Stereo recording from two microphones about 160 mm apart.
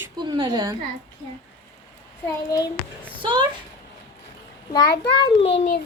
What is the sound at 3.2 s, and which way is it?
Speech, 30° right (ahead or behind).